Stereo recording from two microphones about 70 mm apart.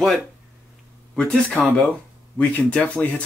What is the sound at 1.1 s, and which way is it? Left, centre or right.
Speech, centre.